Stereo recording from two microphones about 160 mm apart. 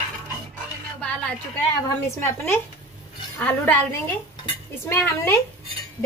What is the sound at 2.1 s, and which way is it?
A woman's voice, 15° left (ahead or behind).